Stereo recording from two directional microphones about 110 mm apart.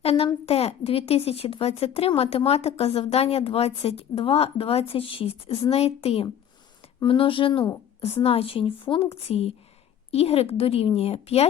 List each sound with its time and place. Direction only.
0.0 s a child's voice: 65° left (ahead or behind)
5.7 s a woman's voice: 70° left (ahead or behind)
7.0 s speech: 50° left (ahead or behind)
8.0 s a woman's voice: 65° left (ahead or behind)
9.1 s a woman's voice: 65° left (ahead or behind)